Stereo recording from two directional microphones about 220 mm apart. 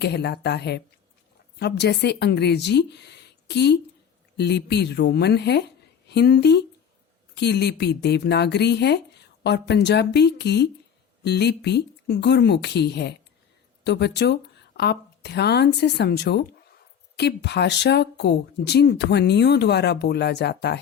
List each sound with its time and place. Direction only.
0.0 s speech: 50° left (ahead or behind)